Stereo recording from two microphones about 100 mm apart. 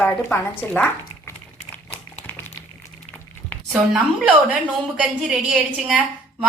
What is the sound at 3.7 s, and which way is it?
A woman's voice, 10° right (ahead or behind).